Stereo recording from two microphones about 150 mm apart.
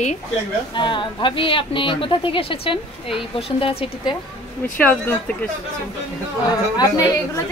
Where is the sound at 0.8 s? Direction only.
30° left (ahead or behind).